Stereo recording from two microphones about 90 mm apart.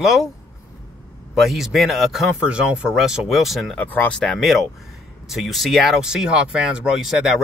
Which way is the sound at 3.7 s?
20° left (ahead or behind).